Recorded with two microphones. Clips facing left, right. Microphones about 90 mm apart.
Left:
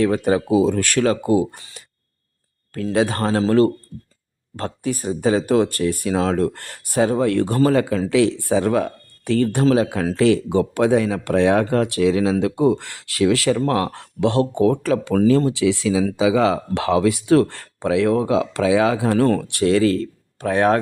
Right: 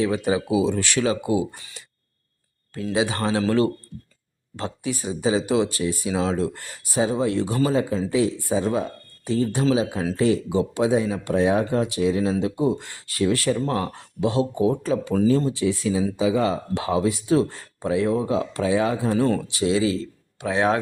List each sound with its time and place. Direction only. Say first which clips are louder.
0.0 s speech: left 4 dB; 50° left (ahead or behind)
2.9 s speech: left 4 dB; 50° left (ahead or behind); by 8.0 s 70° left (ahead or behind)
8.1 s speech: left 5 dB; 80° left; by 10.1 s 60° left (ahead or behind)
10.2 s speech: left 4 dB; 80° left; by 15.3 s 60° left (ahead or behind)
15.3 s speech: left 5 dB; 80° left; by 20.8 s 50° left (ahead or behind)